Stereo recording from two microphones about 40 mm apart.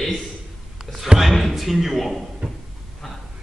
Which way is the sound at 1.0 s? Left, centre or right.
Centre.